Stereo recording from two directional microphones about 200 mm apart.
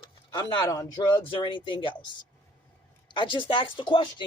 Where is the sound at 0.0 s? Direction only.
20° left (ahead or behind).